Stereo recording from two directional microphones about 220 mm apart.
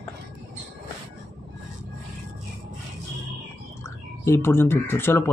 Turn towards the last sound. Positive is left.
turn(degrees=10)  # may be behind; listen again after turning